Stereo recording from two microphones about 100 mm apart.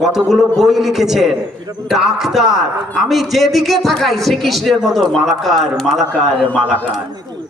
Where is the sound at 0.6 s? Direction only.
5° right (ahead or behind).